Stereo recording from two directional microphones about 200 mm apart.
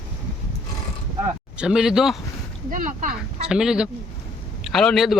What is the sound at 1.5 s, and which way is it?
Speech, 5° right (ahead or behind).